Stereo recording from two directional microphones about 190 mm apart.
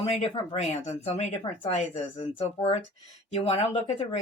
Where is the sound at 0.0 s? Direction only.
30° left (ahead or behind).